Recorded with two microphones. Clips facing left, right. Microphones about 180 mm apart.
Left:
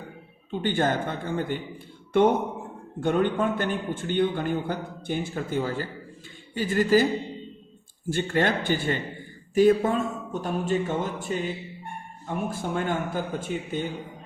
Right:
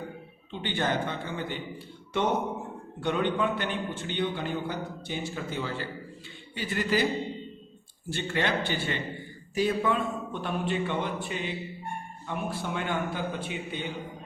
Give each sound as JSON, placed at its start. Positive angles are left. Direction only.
{"t": 0.5, "sound": "a man's voice", "side_deg": 45}
{"t": 8.1, "sound": "a man's voice", "side_deg": 50}